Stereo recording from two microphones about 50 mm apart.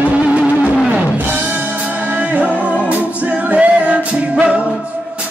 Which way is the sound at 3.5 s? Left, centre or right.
Right.